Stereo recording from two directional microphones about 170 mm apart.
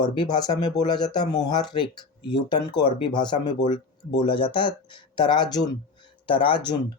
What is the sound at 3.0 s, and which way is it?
Speech, 25° left (ahead or behind).